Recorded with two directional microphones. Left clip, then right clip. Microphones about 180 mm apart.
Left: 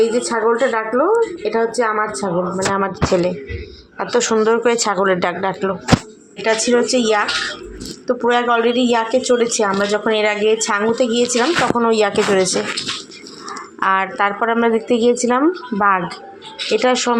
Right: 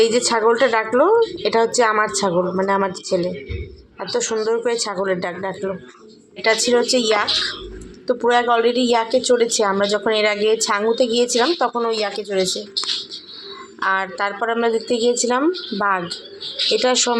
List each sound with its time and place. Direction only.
0.0 s a woman's voice: 10° left (ahead or behind)
11.9 s speech: 40° left (ahead or behind)
13.7 s a woman's voice: 15° left (ahead or behind)